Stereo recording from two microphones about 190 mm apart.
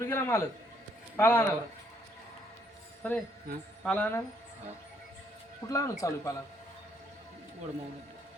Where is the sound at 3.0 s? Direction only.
10° left (ahead or behind).